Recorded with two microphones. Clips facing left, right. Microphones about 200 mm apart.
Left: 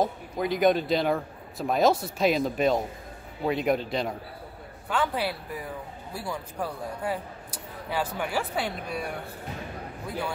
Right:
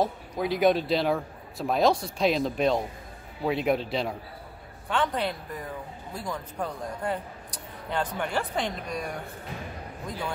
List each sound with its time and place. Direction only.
0.0 s a man's voice: centre (ahead or behind)